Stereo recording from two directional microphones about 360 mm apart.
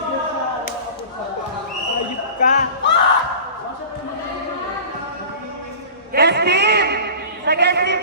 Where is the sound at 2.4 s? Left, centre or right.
Left.